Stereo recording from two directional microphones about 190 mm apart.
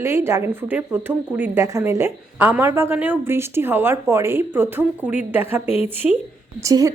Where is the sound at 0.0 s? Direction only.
15° right (ahead or behind).